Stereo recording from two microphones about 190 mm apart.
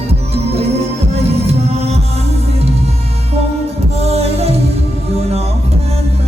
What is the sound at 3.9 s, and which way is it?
Music, 35° right (ahead or behind).